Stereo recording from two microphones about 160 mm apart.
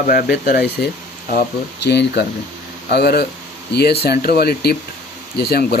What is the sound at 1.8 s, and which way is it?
Speech, 90° left.